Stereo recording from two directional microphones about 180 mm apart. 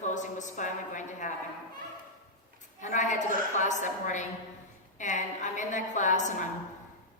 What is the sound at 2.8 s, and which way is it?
A woman's voice, 45° left (ahead or behind).